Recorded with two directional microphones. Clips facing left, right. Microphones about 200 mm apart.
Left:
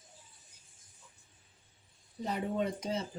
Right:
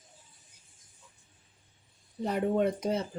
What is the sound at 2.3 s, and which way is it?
Speech, 55° right (ahead or behind).